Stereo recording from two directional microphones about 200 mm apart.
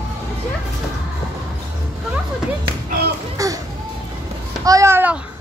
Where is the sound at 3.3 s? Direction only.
15° right (ahead or behind).